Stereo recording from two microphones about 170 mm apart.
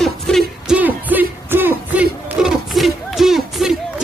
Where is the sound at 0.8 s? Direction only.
10° right (ahead or behind).